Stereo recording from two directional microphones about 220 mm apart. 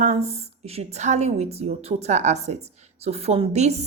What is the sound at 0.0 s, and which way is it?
A woman's voice, 30° right (ahead or behind).